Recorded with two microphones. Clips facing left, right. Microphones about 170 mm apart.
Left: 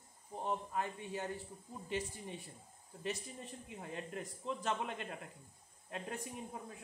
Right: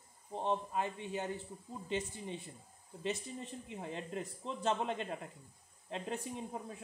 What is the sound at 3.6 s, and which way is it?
Speech, 25° right (ahead or behind).